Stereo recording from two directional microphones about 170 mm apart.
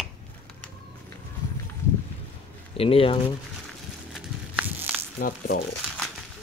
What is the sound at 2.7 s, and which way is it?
Mantra, 35° left (ahead or behind).